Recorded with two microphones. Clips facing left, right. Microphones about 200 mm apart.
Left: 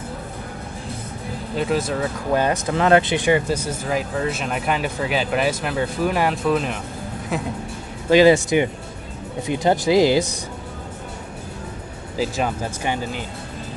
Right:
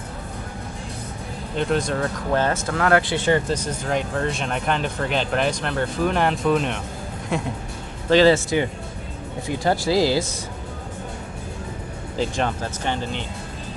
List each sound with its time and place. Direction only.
1.5 s speech: 5° left (ahead or behind)
8.1 s speech: 15° left (ahead or behind)
12.2 s speech: 5° left (ahead or behind)